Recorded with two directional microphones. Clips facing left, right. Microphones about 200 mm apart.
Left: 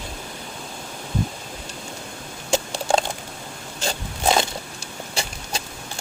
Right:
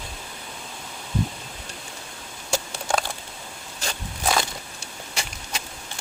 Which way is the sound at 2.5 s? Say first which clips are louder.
Left 5 dB; 25° left (ahead or behind).